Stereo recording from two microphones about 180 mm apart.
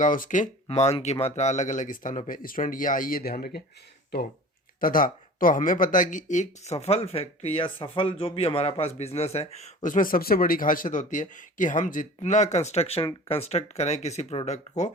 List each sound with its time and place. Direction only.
0.0 s speech: 45° left (ahead or behind)
4.8 s speech: 50° left (ahead or behind)